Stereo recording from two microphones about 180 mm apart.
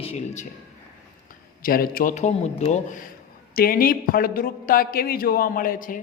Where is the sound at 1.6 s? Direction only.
55° left (ahead or behind).